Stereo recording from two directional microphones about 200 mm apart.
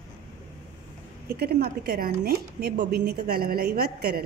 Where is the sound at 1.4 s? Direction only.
50° right (ahead or behind).